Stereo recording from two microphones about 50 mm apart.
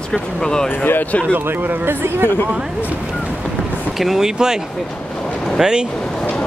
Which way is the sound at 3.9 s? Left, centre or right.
Centre.